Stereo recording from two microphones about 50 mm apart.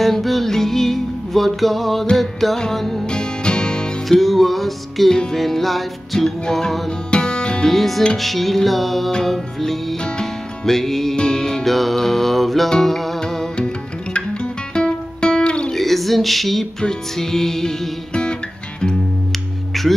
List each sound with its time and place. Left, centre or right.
0.0 s music: centre
3.1 s music: centre
4.2 s music: centre
7.7 s music: centre; by 15.7 s left
15.7 s a sound: centre
16.8 s music: centre
19.7 s music: centre